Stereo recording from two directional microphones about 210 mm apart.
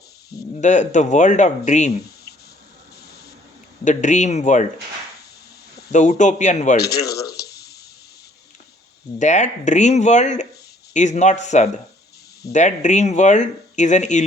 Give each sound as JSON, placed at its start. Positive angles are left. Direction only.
{"t": 0.5, "sound": "speech", "side_deg": 35}
{"t": 3.8, "sound": "speech", "side_deg": 35}
{"t": 5.9, "sound": "speech", "side_deg": 35}
{"t": 6.7, "sound": "speech", "side_deg": 50}
{"t": 9.1, "sound": "speech", "side_deg": 35}